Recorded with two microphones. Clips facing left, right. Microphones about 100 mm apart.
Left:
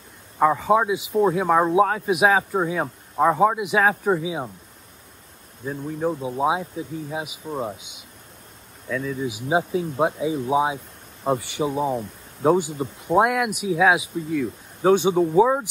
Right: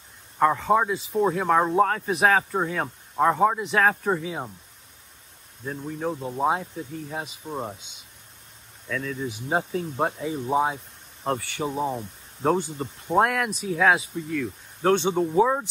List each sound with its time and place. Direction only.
0.4 s speech: 5° left (ahead or behind)
5.7 s speech: 5° left (ahead or behind)
11.3 s speech: 15° left (ahead or behind)
11.6 s speech: 5° left (ahead or behind)